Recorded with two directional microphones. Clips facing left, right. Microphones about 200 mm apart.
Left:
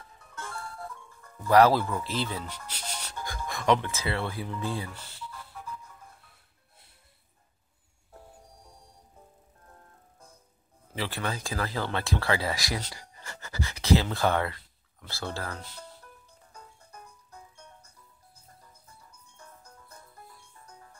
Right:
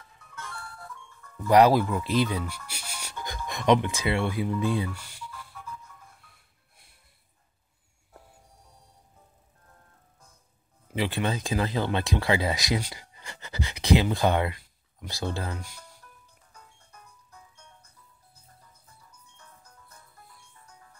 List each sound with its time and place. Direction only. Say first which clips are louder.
1.5 s speech: right 2 dB; 15° right (ahead or behind)
11.0 s speech: right 5 dB; 20° right (ahead or behind)
16.5 s music: left 4 dB; 40° left (ahead or behind)